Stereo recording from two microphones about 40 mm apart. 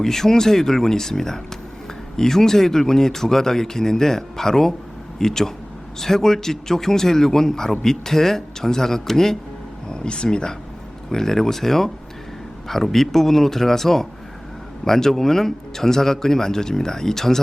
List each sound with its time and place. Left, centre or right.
0.0 s speech: centre
9.9 s speech: left
11.1 s speech: centre